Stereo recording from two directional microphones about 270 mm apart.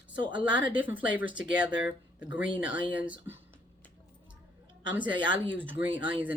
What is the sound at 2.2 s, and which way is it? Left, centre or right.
Speech, centre.